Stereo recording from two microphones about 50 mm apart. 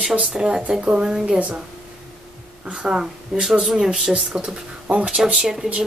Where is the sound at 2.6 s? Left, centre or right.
Centre.